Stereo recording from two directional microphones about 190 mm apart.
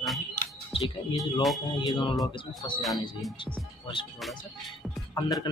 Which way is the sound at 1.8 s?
25° left (ahead or behind).